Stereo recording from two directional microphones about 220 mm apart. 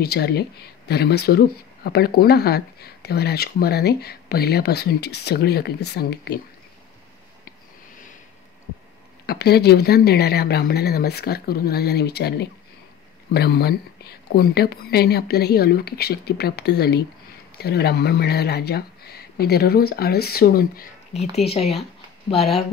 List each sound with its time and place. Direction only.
0.0 s speech: 45° left (ahead or behind)
9.2 s speech: 45° left (ahead or behind)
21.5 s speech: 25° left (ahead or behind)